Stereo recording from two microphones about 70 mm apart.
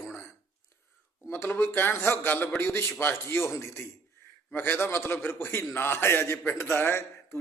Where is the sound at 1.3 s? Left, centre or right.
Left.